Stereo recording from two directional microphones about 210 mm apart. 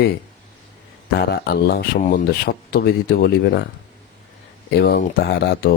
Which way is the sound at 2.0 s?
40° left (ahead or behind).